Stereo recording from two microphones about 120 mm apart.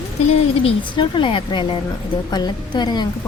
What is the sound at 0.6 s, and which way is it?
A woman's voice, 45° left (ahead or behind).